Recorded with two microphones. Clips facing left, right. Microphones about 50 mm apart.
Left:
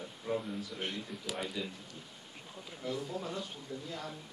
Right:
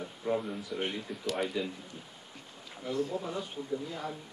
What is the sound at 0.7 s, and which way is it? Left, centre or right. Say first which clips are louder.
Speech: right 7 dB; centre.